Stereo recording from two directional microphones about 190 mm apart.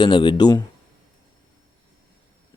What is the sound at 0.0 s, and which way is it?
Speech, 25° left (ahead or behind).